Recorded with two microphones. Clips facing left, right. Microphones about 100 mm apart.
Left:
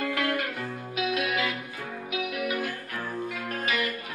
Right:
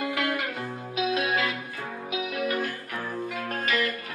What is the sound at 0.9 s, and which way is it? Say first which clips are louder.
Music: right 2 dB; 30° right (ahead or behind).